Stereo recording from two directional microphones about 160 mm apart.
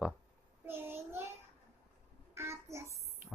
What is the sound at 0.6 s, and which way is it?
Child singing, 15° right (ahead or behind).